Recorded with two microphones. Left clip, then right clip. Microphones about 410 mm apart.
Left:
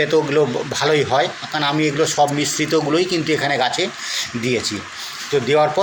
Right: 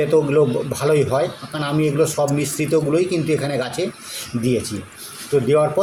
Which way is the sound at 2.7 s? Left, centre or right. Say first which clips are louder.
Right 1 dB; right.